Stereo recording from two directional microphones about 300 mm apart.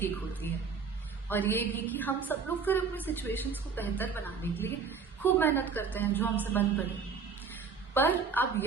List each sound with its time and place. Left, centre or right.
0.4 s a woman's voice: centre
7.9 s a woman's voice: centre